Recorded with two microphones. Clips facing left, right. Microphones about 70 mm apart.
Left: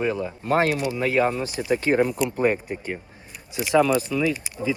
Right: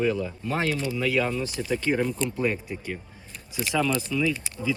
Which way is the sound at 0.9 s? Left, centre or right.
Left.